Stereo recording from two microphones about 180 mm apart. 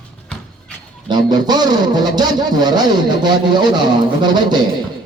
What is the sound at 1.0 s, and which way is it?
Speech, 25° right (ahead or behind).